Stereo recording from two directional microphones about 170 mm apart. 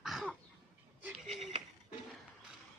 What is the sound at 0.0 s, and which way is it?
Cough, centre (ahead or behind).